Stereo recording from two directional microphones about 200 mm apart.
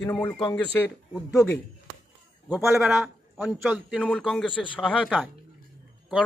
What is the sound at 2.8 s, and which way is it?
A man's voice, centre (ahead or behind).